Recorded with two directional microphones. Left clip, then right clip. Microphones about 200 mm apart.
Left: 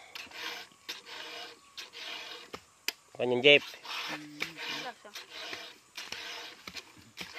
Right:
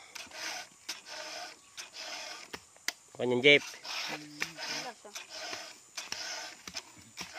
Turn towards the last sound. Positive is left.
turn(degrees=5)  # may be behind; listen again after turning